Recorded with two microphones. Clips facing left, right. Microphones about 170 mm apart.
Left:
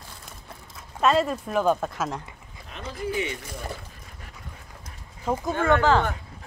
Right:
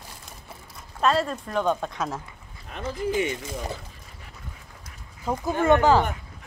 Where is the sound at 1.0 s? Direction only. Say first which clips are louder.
Left 2 dB; 5° left (ahead or behind).